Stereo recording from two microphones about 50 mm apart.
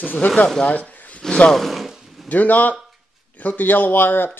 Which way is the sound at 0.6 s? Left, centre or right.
Left.